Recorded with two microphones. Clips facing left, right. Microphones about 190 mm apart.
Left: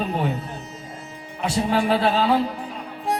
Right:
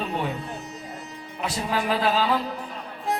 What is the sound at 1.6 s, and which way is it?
Speech, 30° left (ahead or behind).